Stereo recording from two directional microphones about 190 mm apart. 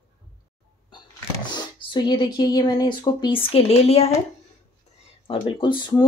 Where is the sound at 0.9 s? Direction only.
25° left (ahead or behind).